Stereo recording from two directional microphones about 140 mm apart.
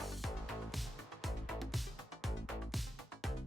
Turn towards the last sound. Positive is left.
turn(degrees=0)  # may be behind; listen again after turning